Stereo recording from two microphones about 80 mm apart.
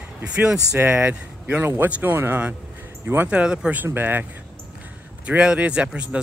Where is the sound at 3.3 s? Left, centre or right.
Centre.